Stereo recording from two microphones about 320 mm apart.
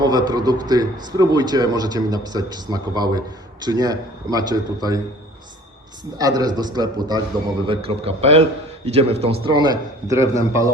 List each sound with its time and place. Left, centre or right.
0.0 s a man's voice: centre
6.1 s a man's voice: centre